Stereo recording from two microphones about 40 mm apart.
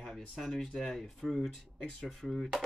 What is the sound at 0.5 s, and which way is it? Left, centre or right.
Speech, centre.